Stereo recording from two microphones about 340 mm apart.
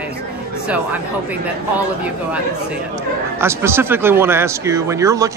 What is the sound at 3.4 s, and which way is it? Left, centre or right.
Speech, centre.